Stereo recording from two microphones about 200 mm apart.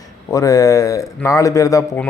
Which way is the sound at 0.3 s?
15° left (ahead or behind).